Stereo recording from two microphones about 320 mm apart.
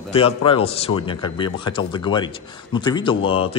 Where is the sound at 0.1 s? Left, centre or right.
Centre.